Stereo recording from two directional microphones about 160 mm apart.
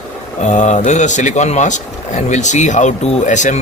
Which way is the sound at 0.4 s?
50° left (ahead or behind).